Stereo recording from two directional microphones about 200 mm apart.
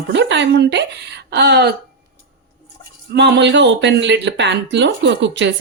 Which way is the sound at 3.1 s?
60° right (ahead or behind).